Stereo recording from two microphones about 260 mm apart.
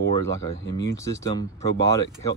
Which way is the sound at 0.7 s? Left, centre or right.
Centre.